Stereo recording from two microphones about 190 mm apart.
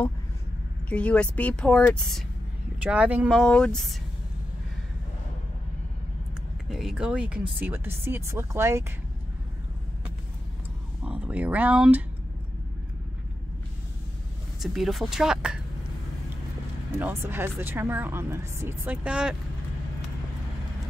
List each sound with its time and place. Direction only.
0.8 s a woman's voice: 5° left (ahead or behind)
6.7 s speech: centre (ahead or behind)
11.1 s speech: 5° right (ahead or behind)
14.6 s a woman's voice: centre (ahead or behind)
17.0 s speech: 10° right (ahead or behind)